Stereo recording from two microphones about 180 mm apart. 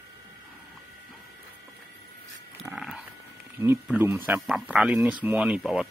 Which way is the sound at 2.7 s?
10° right (ahead or behind).